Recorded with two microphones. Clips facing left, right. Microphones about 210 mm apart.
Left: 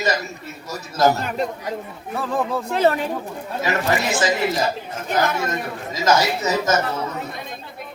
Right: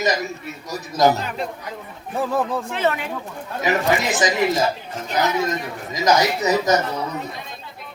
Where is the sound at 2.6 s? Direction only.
40° left (ahead or behind).